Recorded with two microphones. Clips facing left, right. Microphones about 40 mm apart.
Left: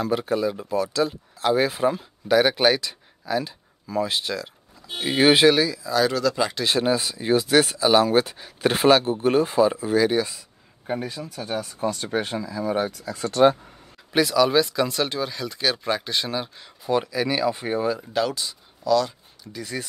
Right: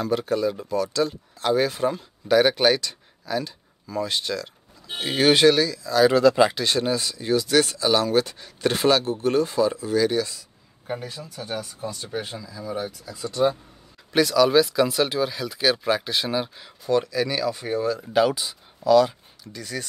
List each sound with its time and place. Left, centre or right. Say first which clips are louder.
0.0 s speech: even; centre
6.1 s speech: right 6 dB; right
6.6 s speech: left 2 dB; centre
11.6 s speech: left 6 dB; left
14.1 s speech: right 1 dB; centre
16.8 s speech: right 1 dB; centre
18.1 s speech: right 4 dB; centre
19.4 s speech: left 1 dB; centre